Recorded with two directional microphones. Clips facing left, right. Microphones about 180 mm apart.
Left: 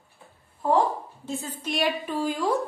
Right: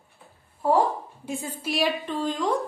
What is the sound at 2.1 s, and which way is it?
Speech, 10° left (ahead or behind).